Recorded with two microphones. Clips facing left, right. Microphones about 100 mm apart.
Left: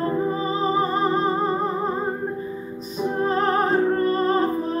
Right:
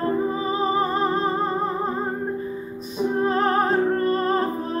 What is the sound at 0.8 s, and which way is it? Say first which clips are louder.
Music: left 1 dB; centre (ahead or behind).